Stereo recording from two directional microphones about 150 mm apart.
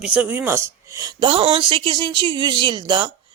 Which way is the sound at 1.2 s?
35° right (ahead or behind).